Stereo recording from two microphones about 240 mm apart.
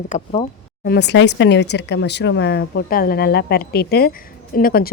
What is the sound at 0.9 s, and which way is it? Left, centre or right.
A woman's voice, left.